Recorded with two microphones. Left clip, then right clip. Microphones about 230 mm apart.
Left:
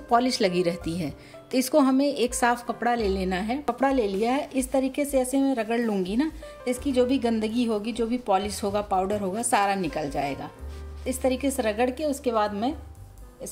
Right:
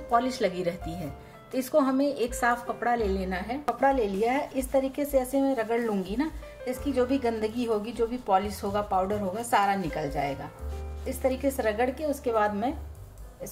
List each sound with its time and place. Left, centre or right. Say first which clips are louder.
0.1 s a woman's voice: left 3 dB; left